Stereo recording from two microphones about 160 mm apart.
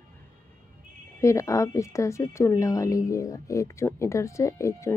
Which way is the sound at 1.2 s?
20° left (ahead or behind).